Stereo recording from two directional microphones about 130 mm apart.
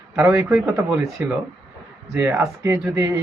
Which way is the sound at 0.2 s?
25° right (ahead or behind).